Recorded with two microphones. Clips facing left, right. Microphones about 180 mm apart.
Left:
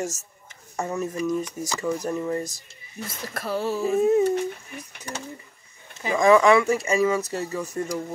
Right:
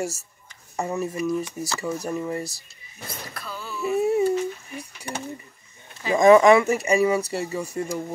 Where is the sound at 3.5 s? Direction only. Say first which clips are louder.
Left 10 dB; 75° left (ahead or behind).